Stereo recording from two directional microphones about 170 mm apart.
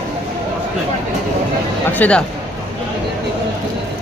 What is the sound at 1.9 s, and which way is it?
Speech, 10° left (ahead or behind).